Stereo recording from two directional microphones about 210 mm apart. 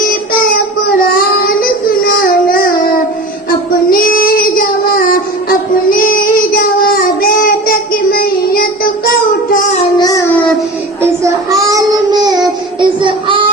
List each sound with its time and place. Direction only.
3.8 s child singing: 45° left (ahead or behind)
10.0 s child singing: 15° left (ahead or behind)
11.7 s a sound: 20° right (ahead or behind)
12.8 s child singing: 20° right (ahead or behind)